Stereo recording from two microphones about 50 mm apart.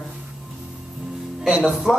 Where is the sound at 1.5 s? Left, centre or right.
Centre.